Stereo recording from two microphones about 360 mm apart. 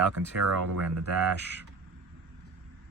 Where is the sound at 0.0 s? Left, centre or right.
Right.